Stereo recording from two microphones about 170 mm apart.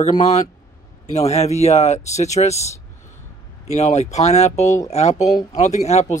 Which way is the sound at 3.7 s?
40° left (ahead or behind).